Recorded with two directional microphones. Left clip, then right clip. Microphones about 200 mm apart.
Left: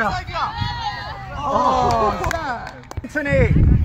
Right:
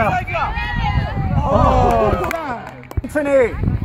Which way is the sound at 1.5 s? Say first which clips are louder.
Right 2 dB; 35° right (ahead or behind).